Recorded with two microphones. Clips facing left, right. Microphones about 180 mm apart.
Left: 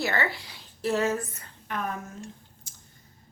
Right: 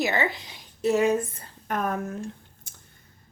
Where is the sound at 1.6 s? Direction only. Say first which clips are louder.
Right 5 dB; 45° right (ahead or behind).